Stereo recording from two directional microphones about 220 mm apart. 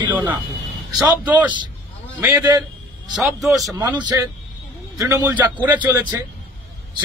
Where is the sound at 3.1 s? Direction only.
Centre (ahead or behind).